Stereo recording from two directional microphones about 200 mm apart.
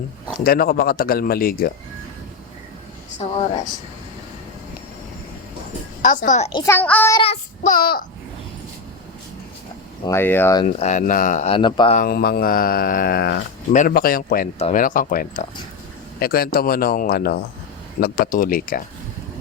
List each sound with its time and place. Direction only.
0.4 s speech: 50° left (ahead or behind)
3.2 s speech: 30° left (ahead or behind)
6.0 s speech: 40° left (ahead or behind)
6.5 s speech: 20° left (ahead or behind)
6.7 s speech: 10° left (ahead or behind)
7.1 s child singing: 30° left (ahead or behind); by 8.0 s 45° left (ahead or behind)
10.1 s speech: 10° left (ahead or behind)
10.6 s speech: 35° left (ahead or behind)
11.5 s speech: 25° left (ahead or behind)
11.9 s speech: 50° left (ahead or behind)